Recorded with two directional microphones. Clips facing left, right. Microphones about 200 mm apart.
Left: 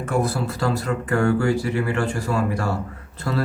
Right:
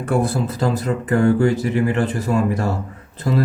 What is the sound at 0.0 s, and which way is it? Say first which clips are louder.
Speech: right 3 dB; 25° right (ahead or behind).